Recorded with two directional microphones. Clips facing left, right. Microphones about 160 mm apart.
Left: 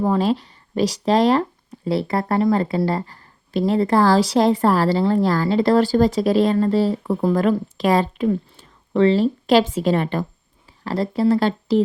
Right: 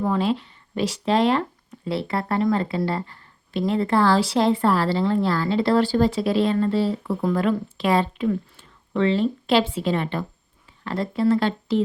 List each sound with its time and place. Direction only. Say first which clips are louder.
0.0 s speech: left 3 dB; 40° left (ahead or behind)